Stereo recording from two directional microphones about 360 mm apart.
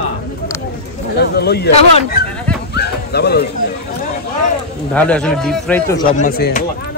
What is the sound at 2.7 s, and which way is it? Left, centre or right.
Dog, left.